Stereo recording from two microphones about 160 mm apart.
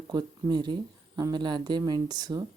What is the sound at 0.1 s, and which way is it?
Speech, 25° right (ahead or behind).